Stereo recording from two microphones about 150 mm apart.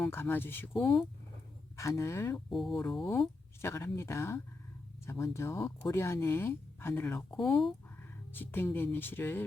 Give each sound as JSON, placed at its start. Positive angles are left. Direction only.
{"t": 0.0, "sound": "speech", "side_deg": 15}
{"t": 0.7, "sound": "speech", "side_deg": 0}
{"t": 1.7, "sound": "speech", "side_deg": 20}
{"t": 2.5, "sound": "speech", "side_deg": 0}
{"t": 3.6, "sound": "speech", "side_deg": 15}